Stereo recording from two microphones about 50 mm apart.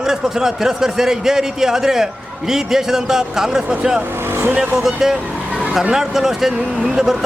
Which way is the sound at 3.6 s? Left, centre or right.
Right.